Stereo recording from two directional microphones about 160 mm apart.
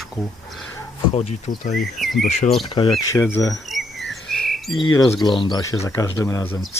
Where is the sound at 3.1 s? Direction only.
15° left (ahead or behind).